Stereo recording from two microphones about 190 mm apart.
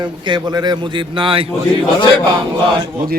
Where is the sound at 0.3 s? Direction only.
20° right (ahead or behind).